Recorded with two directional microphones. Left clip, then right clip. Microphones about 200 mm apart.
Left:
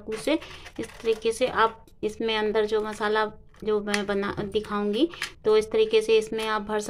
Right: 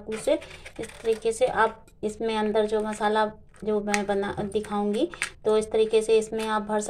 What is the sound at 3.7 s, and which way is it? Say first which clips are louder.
A woman's voice: even; 20° left (ahead or behind).